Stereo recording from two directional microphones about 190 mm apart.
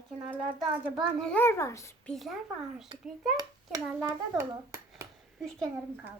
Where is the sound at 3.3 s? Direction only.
15° right (ahead or behind).